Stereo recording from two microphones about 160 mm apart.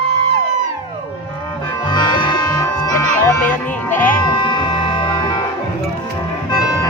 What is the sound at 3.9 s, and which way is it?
Music, 55° left (ahead or behind).